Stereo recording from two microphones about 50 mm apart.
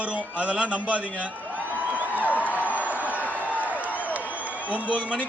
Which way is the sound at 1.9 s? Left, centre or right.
Right.